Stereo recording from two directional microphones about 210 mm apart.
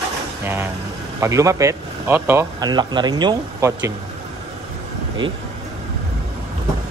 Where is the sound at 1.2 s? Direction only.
15° right (ahead or behind).